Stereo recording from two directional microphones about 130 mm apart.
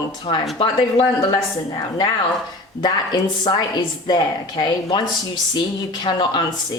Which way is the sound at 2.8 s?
30° left (ahead or behind).